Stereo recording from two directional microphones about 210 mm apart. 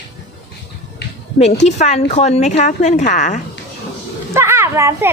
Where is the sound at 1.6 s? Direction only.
35° left (ahead or behind).